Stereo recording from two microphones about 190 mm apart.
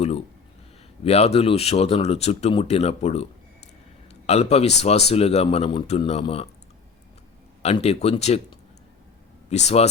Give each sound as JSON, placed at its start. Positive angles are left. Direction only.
{"t": 1.0, "sound": "speech", "side_deg": 30}
{"t": 4.3, "sound": "speech", "side_deg": 35}
{"t": 7.6, "sound": "speech", "side_deg": 35}
{"t": 9.5, "sound": "speech", "side_deg": 35}